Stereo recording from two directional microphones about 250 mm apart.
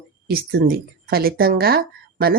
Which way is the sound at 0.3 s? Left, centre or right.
Right.